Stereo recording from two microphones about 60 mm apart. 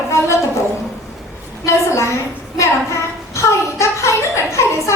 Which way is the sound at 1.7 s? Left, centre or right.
Left.